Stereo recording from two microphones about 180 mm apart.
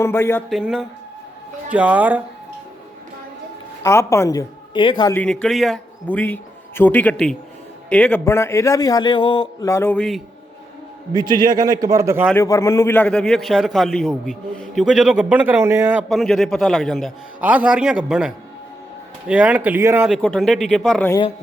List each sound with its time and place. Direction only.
0.0 s a man's voice: 15° left (ahead or behind)
0.5 s a man's voice: 5° right (ahead or behind)
3.8 s a woman's voice: 15° left (ahead or behind)
5.1 s a man's voice: 5° left (ahead or behind)
11.1 s a man's voice: 25° right (ahead or behind)
12.3 s a man's voice: 15° left (ahead or behind); by 16.0 s 10° right (ahead or behind)
16.0 s a man's voice: centre (ahead or behind)
20.1 s a man's voice: centre (ahead or behind)
21.1 s a woman's voice: 25° left (ahead or behind)